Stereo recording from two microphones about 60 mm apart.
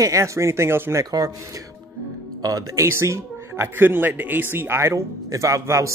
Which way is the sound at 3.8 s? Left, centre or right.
Right.